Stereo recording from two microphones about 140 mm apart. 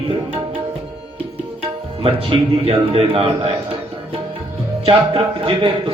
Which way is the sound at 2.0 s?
40° right (ahead or behind).